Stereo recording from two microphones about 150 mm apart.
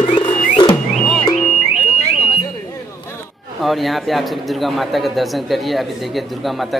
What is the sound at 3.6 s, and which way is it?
A man's voice, centre (ahead or behind).